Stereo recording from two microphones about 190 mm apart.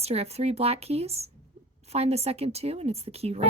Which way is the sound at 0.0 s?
35° right (ahead or behind).